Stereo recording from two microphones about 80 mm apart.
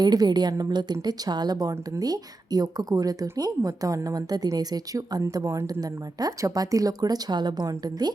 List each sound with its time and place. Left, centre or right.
0.0 s a woman's voice: right